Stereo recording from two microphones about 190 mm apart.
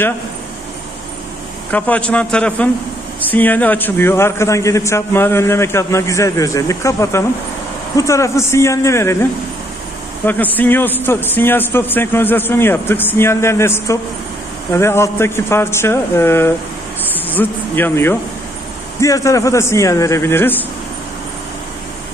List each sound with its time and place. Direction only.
1.7 s a man's voice: 10° left (ahead or behind)